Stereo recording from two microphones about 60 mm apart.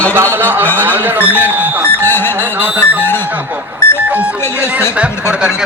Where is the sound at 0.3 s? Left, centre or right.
Right.